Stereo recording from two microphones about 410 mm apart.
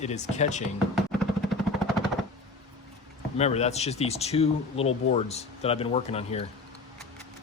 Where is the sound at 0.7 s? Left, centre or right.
Centre.